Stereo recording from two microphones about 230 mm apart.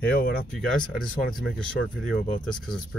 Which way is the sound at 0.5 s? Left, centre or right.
Centre.